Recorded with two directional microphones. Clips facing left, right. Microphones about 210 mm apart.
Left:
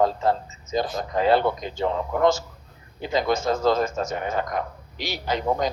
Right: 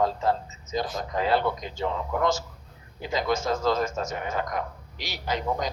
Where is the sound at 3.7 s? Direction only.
60° left (ahead or behind).